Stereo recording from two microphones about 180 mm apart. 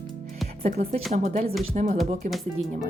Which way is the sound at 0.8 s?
35° right (ahead or behind).